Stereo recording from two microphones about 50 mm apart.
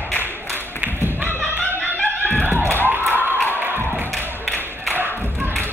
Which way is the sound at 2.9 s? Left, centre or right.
Right.